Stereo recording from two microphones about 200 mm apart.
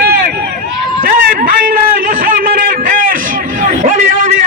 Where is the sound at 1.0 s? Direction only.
45° right (ahead or behind).